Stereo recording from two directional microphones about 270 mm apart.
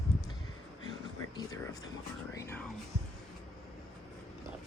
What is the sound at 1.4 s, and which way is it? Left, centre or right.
Speech, centre.